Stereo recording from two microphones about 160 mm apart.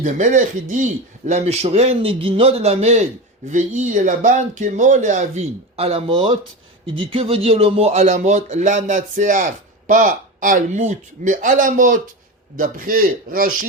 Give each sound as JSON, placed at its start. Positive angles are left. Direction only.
{"t": 0.0, "sound": "a man's voice", "side_deg": -50}